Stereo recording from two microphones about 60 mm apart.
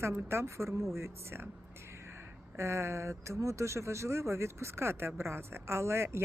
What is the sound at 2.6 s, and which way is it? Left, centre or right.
Speech, right.